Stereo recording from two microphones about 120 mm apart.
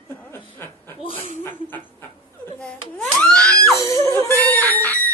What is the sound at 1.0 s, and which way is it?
Speech, 55° left (ahead or behind).